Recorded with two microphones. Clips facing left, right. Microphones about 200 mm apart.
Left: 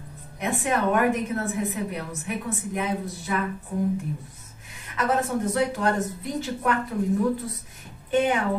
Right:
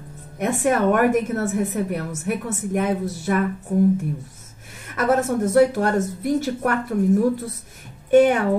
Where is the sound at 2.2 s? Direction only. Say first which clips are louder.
Right 5 dB; 45° right (ahead or behind).